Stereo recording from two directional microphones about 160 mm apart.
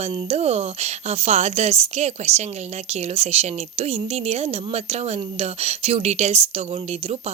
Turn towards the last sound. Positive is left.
turn(degrees=-40)  # may be behind; listen again after turning